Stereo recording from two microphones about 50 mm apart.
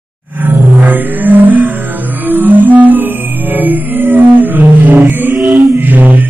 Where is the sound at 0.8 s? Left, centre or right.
Right.